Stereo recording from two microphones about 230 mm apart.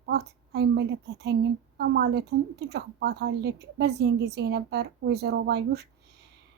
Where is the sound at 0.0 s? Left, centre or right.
Right.